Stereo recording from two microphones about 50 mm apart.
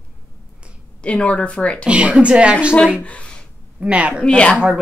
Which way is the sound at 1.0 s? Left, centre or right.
Left.